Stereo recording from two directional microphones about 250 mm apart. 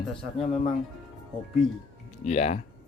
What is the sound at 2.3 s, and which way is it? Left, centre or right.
Speech, left.